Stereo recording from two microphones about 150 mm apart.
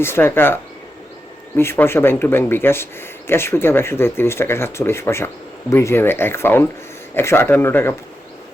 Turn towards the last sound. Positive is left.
turn(degrees=15)  # may be behind; listen again after turning